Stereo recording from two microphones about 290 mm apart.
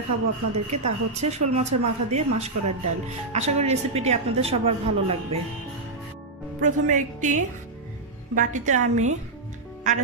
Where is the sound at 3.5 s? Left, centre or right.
Right.